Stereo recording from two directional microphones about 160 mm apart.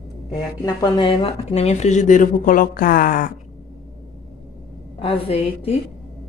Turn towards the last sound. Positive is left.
turn(degrees=35)  # may be behind; listen again after turning